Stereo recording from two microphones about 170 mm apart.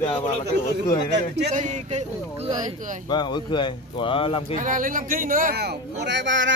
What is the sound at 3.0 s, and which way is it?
A man's voice, 25° left (ahead or behind).